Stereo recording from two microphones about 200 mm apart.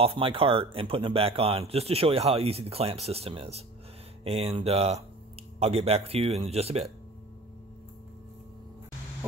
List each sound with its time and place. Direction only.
0.0 s speech: 30° right (ahead or behind)